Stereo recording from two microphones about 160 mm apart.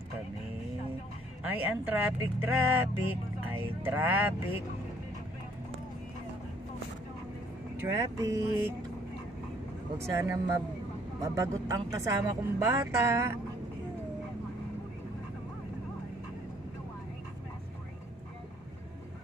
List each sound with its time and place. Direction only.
1.4 s speech: 10° right (ahead or behind)
7.8 s speech: 15° right (ahead or behind)
9.9 s speech: 15° right (ahead or behind)